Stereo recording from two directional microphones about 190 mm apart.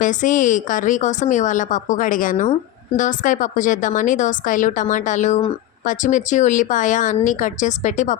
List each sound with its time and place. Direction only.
0.0 s a woman's voice: 40° left (ahead or behind)